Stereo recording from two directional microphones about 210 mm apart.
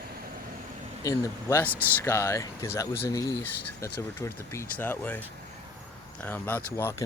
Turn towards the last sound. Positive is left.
turn(degrees=10)  # may be behind; listen again after turning